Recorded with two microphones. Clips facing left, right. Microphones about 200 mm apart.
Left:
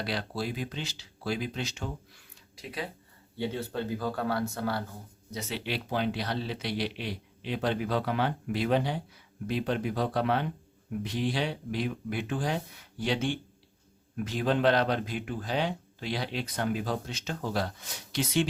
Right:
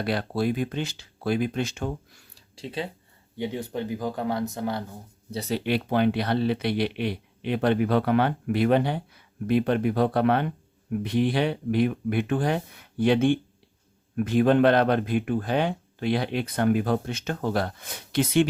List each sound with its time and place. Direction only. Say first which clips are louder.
0.0 s speech: right 7 dB; 55° right (ahead or behind)
2.3 s a sound: right 6 dB; 30° right (ahead or behind)
3.3 s speech: right 2 dB; 15° right (ahead or behind)
5.3 s speech: right 8 dB; 35° right (ahead or behind); by 18.4 s 55° right (ahead or behind)